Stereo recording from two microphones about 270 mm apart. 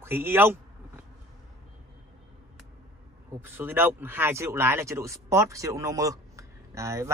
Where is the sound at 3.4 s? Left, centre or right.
Centre.